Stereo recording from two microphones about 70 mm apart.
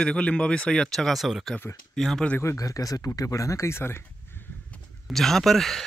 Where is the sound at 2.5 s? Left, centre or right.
Left.